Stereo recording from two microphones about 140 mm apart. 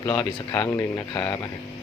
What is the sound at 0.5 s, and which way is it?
Speech, 20° left (ahead or behind).